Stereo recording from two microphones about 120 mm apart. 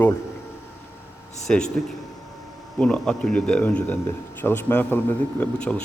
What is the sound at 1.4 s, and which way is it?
Speech, 5° left (ahead or behind).